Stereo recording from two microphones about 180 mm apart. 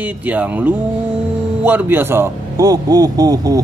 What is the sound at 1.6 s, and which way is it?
A man's voice, 10° right (ahead or behind).